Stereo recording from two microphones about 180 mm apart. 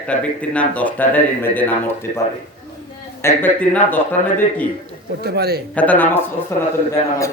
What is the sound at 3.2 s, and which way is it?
Speech, 10° left (ahead or behind).